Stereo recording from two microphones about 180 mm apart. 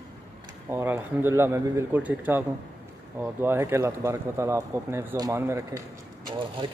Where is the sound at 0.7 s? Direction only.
10° right (ahead or behind).